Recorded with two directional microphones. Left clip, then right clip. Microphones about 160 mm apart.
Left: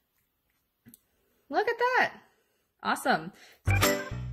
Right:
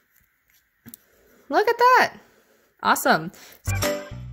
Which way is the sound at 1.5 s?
45° right (ahead or behind).